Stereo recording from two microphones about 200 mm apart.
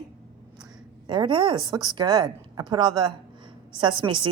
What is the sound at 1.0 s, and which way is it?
A woman's voice, 25° right (ahead or behind).